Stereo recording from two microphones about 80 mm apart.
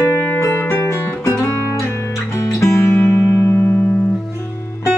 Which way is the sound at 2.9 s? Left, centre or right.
Left.